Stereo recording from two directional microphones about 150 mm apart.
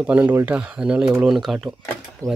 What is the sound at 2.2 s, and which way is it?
Speech, 20° right (ahead or behind).